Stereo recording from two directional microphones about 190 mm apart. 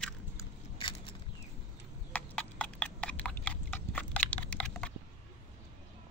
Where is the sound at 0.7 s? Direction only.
25° left (ahead or behind).